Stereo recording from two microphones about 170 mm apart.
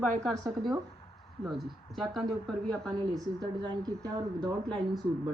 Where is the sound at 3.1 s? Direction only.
25° right (ahead or behind).